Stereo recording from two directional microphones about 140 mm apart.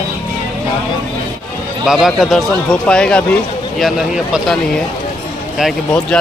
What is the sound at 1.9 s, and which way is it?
Speech, centre (ahead or behind).